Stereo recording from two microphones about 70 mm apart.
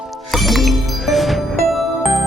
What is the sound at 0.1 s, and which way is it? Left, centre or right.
Music, centre.